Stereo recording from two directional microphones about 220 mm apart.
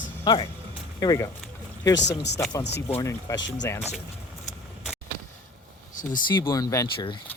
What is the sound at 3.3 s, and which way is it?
Speech, 15° left (ahead or behind).